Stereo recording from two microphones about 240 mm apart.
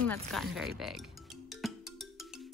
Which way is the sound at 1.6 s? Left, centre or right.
Centre.